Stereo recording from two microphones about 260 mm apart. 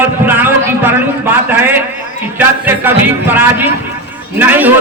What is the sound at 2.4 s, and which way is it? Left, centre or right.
Speech, centre.